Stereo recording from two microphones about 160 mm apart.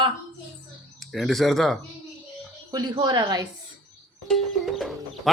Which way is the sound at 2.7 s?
25° right (ahead or behind).